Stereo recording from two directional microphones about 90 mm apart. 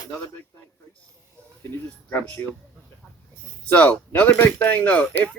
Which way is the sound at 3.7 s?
15° left (ahead or behind).